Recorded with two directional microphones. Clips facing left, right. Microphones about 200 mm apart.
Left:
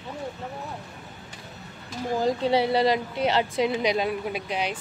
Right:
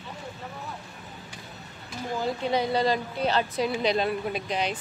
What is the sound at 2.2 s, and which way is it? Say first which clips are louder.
A woman's voice: left 4 dB; 30° left (ahead or behind).